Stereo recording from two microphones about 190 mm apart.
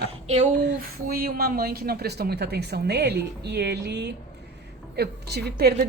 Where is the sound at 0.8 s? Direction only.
50° right (ahead or behind).